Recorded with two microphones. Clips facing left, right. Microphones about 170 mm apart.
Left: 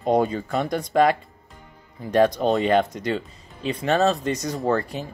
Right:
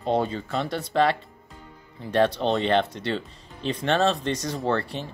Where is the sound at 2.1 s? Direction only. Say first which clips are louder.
Left 3 dB; 10° left (ahead or behind).